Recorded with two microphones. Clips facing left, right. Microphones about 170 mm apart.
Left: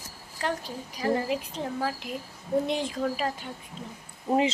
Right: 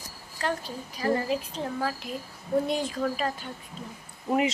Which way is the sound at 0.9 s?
15° left (ahead or behind).